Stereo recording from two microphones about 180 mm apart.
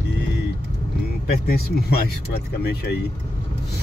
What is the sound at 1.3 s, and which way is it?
Speech, 60° left (ahead or behind).